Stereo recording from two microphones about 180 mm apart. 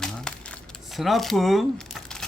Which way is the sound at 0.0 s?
5° left (ahead or behind).